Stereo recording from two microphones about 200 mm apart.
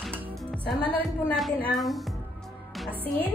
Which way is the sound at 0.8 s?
25° right (ahead or behind).